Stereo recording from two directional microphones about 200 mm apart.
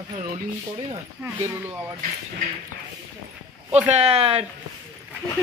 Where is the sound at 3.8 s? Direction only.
35° right (ahead or behind).